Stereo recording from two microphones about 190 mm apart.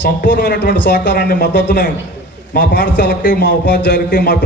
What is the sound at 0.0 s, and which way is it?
A man's voice, 60° left (ahead or behind).